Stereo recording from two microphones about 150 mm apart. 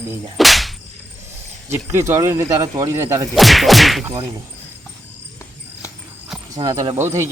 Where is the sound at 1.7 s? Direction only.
20° right (ahead or behind).